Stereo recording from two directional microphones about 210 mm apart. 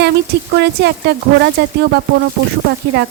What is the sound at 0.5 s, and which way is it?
Speech, 50° right (ahead or behind).